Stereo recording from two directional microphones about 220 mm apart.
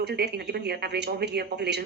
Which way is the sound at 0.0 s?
45° right (ahead or behind).